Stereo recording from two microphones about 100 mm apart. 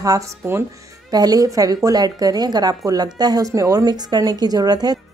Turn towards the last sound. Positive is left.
turn(degrees=-40)  # may be behind; listen again after turning